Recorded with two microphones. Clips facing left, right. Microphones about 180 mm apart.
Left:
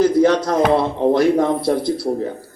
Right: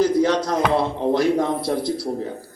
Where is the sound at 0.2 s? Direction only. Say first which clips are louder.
Left 4 dB; 55° left (ahead or behind).